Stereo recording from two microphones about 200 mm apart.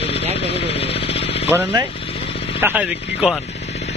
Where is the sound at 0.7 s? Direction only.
30° left (ahead or behind).